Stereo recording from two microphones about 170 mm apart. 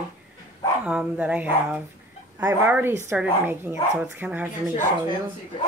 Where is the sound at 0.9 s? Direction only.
5° right (ahead or behind).